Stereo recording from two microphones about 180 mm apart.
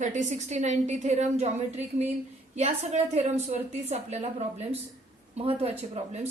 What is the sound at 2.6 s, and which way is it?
A woman's voice, 35° right (ahead or behind).